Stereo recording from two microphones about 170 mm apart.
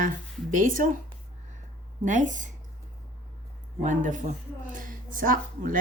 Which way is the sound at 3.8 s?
50° right (ahead or behind).